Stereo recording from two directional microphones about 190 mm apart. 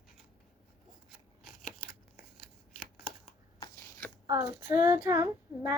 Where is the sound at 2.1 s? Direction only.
50° left (ahead or behind).